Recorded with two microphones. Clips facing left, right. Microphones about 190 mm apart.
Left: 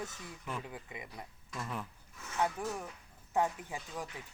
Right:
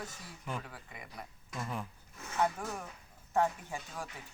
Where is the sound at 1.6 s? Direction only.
10° right (ahead or behind).